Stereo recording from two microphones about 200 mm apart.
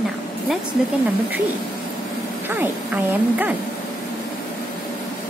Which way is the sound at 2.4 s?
10° right (ahead or behind).